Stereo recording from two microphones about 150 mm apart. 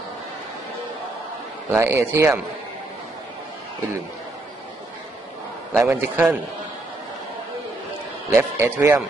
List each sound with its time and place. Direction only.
1.7 s speech: 15° right (ahead or behind)
5.8 s speech: 15° right (ahead or behind)
8.3 s speech: 15° right (ahead or behind)